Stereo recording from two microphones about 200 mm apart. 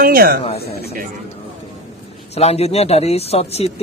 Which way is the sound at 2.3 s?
30° left (ahead or behind).